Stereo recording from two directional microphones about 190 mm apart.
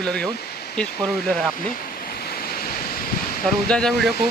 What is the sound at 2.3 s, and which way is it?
Waves, 50° left (ahead or behind).